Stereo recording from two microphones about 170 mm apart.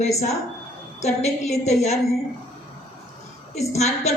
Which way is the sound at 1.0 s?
40° left (ahead or behind).